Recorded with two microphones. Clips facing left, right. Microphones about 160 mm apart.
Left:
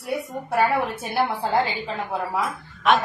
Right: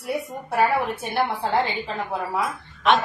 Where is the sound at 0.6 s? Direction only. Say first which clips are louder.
Right 1 dB; centre (ahead or behind).